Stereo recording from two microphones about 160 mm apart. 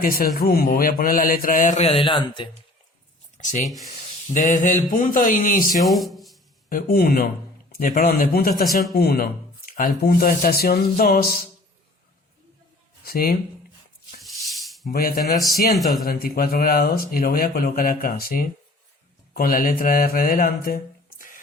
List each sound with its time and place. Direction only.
0.0 s a man's voice: 65° left (ahead or behind); by 2.5 s 30° left (ahead or behind)
3.3 s a man's voice: 50° left (ahead or behind)
5.8 s speech: centre (ahead or behind)
6.7 s a man's voice: 65° left (ahead or behind)
13.1 s speech: 70° left (ahead or behind)
14.4 s a sound: centre (ahead or behind)
14.8 s a man's voice: 65° left (ahead or behind)